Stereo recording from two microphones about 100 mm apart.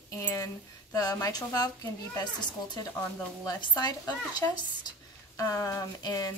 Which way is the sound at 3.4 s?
40° left (ahead or behind).